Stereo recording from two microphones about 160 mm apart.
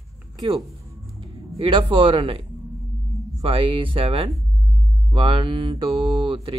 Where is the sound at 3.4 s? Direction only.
35° right (ahead or behind).